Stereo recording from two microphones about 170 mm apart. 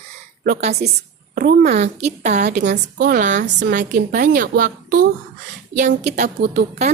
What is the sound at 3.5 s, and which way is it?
Speech, 90° right.